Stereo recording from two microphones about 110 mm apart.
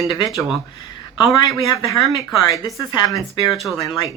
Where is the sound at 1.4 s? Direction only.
35° left (ahead or behind).